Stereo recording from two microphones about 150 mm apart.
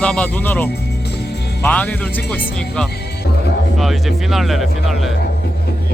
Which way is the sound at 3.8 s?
Centre (ahead or behind).